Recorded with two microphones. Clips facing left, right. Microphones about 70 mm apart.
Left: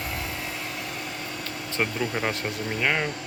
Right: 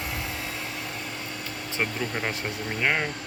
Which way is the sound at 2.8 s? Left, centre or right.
Centre.